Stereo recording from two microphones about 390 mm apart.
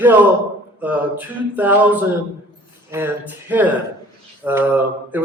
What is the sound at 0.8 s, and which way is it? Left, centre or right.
A man's voice, centre.